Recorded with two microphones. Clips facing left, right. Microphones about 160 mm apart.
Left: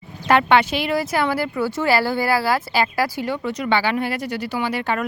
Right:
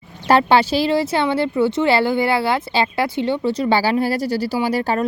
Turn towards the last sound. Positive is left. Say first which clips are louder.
# right 4 dB
turn(degrees=-35)  # may be behind; listen again after turning